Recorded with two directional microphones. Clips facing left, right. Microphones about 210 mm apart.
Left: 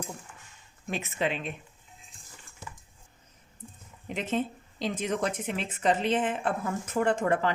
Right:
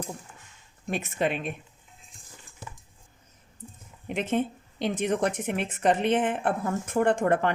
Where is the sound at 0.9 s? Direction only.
50° right (ahead or behind).